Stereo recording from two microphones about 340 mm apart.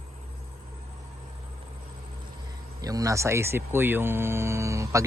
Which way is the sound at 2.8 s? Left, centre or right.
Centre.